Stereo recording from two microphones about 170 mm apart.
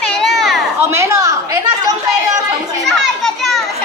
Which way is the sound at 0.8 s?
15° right (ahead or behind).